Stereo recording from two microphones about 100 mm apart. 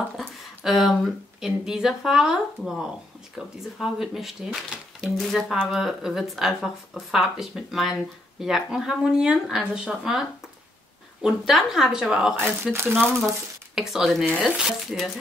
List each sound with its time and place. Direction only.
0.7 s speech: centre (ahead or behind)
11.2 s speech: 5° right (ahead or behind)
12.7 s speech: 25° right (ahead or behind)
13.7 s speech: centre (ahead or behind)